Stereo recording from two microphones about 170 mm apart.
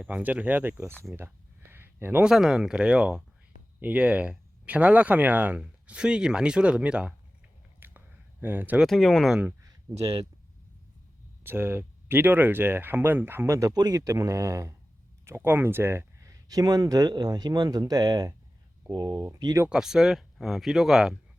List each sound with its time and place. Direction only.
0.0 s speech: 10° right (ahead or behind)
7.8 s a sound: 10° right (ahead or behind)
8.9 s speech: centre (ahead or behind)
11.4 s speech: 10° right (ahead or behind)
19.6 s speech: 5° right (ahead or behind)